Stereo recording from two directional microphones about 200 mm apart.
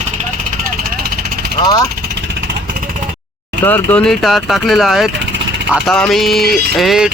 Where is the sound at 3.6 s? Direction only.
10° left (ahead or behind).